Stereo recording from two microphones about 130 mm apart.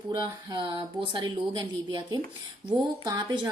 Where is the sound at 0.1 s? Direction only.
35° right (ahead or behind).